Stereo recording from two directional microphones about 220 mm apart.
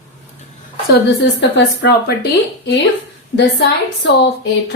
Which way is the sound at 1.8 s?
50° left (ahead or behind).